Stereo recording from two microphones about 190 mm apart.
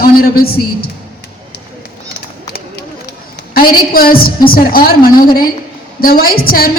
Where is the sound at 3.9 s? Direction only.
50° left (ahead or behind).